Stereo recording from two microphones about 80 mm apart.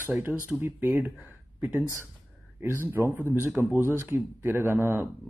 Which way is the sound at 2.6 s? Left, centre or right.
Right.